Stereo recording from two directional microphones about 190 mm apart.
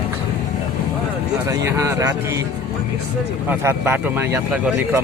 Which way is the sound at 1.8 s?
15° right (ahead or behind).